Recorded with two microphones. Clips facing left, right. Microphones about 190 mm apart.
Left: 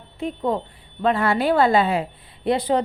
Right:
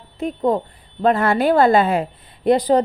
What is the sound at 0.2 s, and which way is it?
A woman's voice, 40° right (ahead or behind).